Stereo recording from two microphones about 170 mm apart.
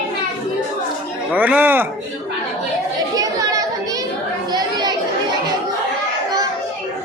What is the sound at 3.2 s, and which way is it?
Chatter, 20° right (ahead or behind).